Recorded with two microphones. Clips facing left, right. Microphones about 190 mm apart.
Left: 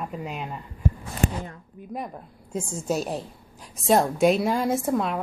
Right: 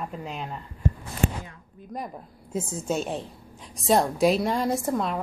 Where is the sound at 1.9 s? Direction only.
5° left (ahead or behind).